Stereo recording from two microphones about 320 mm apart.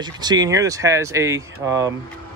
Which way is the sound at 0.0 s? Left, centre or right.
Centre.